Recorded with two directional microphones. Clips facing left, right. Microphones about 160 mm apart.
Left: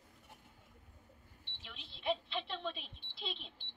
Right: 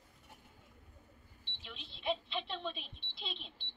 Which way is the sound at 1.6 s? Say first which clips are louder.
Even; 5° left (ahead or behind).